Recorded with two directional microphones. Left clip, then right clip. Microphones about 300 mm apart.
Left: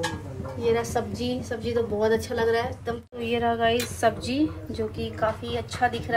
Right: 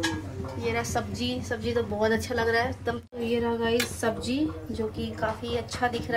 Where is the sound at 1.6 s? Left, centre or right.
Centre.